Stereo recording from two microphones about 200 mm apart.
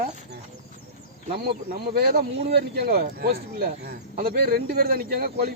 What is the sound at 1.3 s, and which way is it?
Speech, 50° right (ahead or behind).